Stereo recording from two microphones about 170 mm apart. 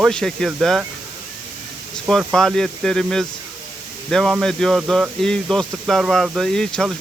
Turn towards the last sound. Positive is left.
turn(degrees=5)  # may be behind; listen again after turning